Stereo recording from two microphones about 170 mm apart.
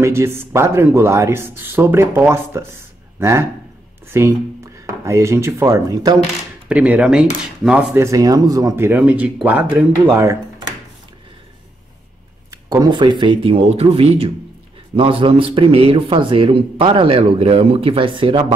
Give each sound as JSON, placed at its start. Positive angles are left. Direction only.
{"t": 0.0, "sound": "speech", "side_deg": -15}
{"t": 6.7, "sound": "speech", "side_deg": -5}
{"t": 12.4, "sound": "a man's voice", "side_deg": -20}